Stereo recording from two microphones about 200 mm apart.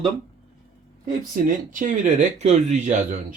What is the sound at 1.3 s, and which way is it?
Speech, 40° right (ahead or behind).